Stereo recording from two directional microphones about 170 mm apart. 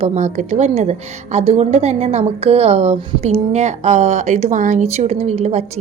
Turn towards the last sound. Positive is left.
turn(degrees=-40)  # may be behind; listen again after turning